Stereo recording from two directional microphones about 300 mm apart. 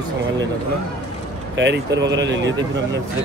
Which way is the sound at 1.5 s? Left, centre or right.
Right.